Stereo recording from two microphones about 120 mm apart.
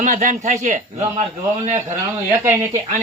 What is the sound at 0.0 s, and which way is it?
Speech, 90° right.